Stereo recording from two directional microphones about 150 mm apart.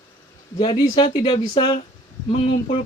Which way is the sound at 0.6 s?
40° left (ahead or behind).